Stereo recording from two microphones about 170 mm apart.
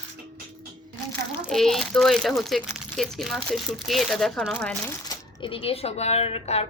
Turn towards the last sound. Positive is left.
turn(degrees=35)  # may be behind; listen again after turning